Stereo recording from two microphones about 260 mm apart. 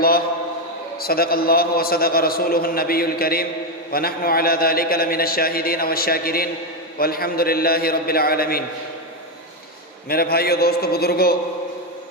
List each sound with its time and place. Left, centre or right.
0.9 s a man's voice: left
10.1 s a man's voice: left